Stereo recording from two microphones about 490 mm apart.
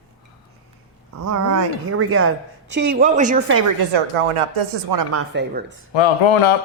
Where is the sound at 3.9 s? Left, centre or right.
Right.